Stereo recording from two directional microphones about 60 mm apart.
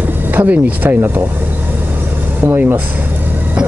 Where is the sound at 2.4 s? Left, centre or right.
Right.